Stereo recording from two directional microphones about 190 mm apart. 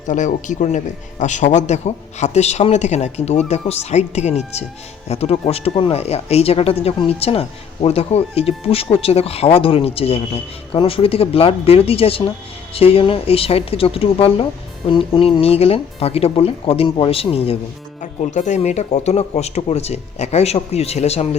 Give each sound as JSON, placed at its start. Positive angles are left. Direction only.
{"t": 0.1, "sound": "speech", "side_deg": 40}